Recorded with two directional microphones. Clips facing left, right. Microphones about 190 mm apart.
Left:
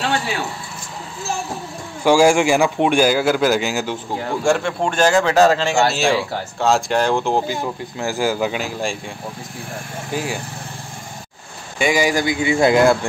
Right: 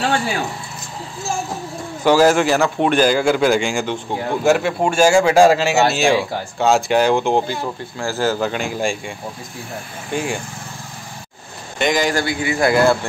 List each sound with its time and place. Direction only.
2.0 s a man's voice: 10° left (ahead or behind)
4.4 s a man's voice: 5° right (ahead or behind)
8.0 s a man's voice: 15° left (ahead or behind)
10.1 s speech: 5° left (ahead or behind)
11.8 s a man's voice: 10° left (ahead or behind); by 12.7 s 25° left (ahead or behind)